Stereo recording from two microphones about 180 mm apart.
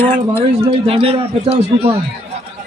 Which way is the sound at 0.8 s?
30° right (ahead or behind).